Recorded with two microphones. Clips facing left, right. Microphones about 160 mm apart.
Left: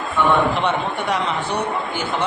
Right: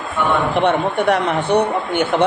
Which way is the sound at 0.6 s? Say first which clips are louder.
Right 6 dB; 55° right (ahead or behind).